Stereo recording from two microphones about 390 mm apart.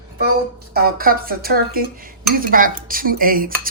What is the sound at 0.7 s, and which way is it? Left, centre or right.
Speech, right.